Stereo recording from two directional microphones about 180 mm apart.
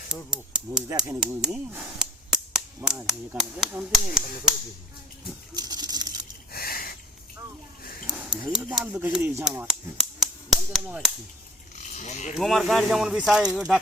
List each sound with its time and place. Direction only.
0.3 s speech: 5° right (ahead or behind)
0.9 s speech: 15° right (ahead or behind)
5.5 s a sound: 20° right (ahead or behind)
6.5 s a sound: 55° left (ahead or behind)
8.0 s speech: 5° right (ahead or behind)
9.4 s speech: 5° right (ahead or behind)
11.9 s speech: 40° left (ahead or behind)
12.4 s speech: centre (ahead or behind)